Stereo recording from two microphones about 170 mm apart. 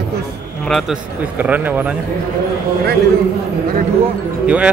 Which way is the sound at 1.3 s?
10° right (ahead or behind).